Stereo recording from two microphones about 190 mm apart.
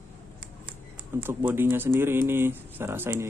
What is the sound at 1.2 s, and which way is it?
Speech, 10° right (ahead or behind).